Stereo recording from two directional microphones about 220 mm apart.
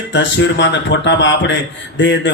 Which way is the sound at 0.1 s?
55° left (ahead or behind).